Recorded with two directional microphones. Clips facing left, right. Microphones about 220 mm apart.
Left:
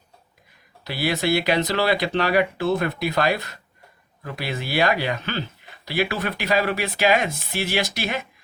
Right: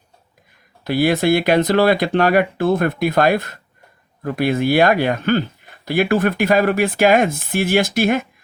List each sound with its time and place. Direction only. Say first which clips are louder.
0.9 s speech: right 7 dB; 50° right (ahead or behind)